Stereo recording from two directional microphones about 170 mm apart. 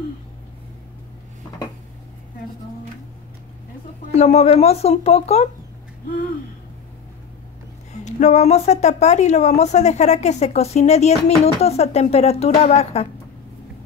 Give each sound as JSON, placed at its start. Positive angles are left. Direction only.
{"t": 4.1, "sound": "speech", "side_deg": 40}
{"t": 7.9, "sound": "speech", "side_deg": 45}